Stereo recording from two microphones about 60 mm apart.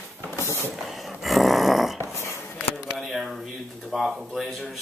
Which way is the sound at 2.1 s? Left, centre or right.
Left.